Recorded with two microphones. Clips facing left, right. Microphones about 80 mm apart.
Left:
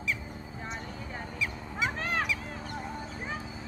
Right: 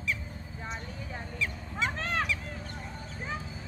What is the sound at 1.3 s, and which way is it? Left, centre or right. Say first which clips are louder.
Goose: even; centre.